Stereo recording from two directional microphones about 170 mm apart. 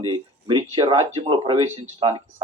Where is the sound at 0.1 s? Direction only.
30° right (ahead or behind).